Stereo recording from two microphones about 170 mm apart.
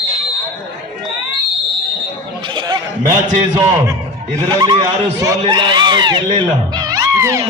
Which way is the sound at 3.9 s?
25° right (ahead or behind).